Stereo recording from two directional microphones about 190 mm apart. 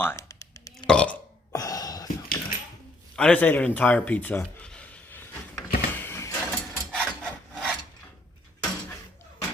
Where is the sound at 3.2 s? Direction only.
5° left (ahead or behind).